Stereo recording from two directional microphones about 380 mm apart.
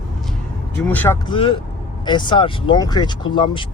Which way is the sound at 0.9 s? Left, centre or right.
Centre.